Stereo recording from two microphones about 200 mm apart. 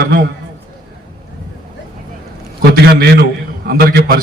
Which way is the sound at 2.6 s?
50° right (ahead or behind).